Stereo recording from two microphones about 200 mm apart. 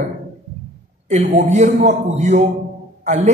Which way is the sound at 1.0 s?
35° right (ahead or behind).